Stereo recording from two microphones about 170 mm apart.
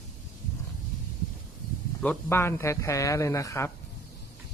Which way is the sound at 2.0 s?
10° left (ahead or behind).